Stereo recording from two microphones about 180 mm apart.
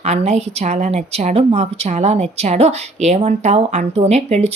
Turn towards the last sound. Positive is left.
turn(degrees=-35)  # may be behind; listen again after turning